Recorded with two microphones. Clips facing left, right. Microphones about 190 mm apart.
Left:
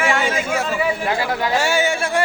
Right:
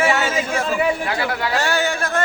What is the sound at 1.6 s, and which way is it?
Speech, 10° left (ahead or behind).